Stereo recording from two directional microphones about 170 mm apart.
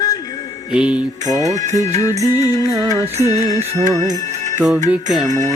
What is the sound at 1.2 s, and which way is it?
Music, 45° right (ahead or behind).